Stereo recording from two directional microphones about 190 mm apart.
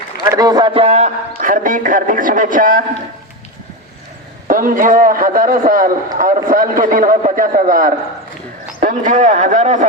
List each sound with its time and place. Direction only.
0.3 s a man's voice: 20° right (ahead or behind); by 2.8 s 45° right (ahead or behind)
4.4 s a man's voice: 45° right (ahead or behind)